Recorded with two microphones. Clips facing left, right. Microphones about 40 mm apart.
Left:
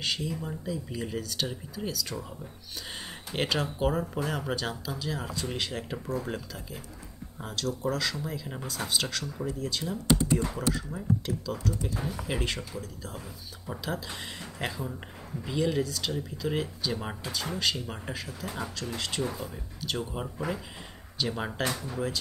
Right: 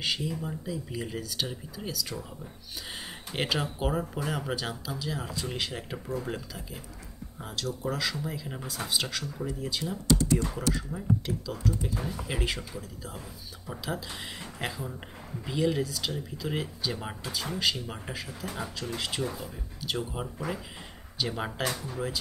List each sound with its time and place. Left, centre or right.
0.0 s speech: centre
10.0 s speech: left
10.9 s speech: centre
11.5 s speech: centre